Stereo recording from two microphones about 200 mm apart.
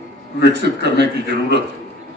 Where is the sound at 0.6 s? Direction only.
55° right (ahead or behind).